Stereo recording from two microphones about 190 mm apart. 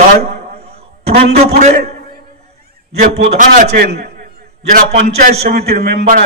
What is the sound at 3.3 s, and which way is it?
A man's voice, 40° right (ahead or behind).